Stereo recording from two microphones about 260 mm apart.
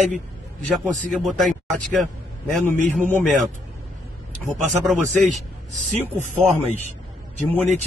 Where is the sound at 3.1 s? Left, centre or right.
Centre.